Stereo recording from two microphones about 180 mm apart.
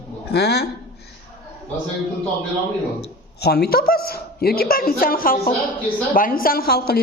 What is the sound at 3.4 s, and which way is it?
A woman's voice, 65° left (ahead or behind).